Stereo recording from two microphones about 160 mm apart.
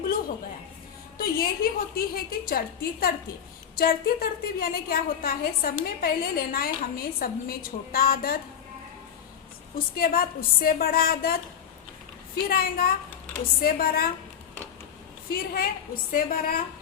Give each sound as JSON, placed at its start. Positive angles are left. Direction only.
{"t": 1.2, "sound": "a woman's voice", "side_deg": 70}
{"t": 9.7, "sound": "a woman's voice", "side_deg": 65}
{"t": 12.5, "sound": "a woman's voice", "side_deg": 70}
{"t": 15.3, "sound": "a woman's voice", "side_deg": 70}